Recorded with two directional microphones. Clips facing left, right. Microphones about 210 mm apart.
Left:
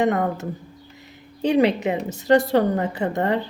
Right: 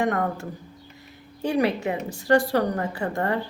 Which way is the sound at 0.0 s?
20° left (ahead or behind).